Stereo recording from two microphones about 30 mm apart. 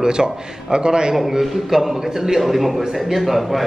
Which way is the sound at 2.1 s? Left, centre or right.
Centre.